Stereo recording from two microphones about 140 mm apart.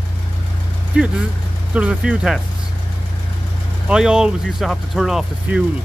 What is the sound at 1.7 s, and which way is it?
Speech, 10° right (ahead or behind).